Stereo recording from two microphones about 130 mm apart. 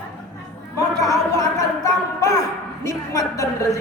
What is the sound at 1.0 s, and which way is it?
A woman's voice, 25° left (ahead or behind).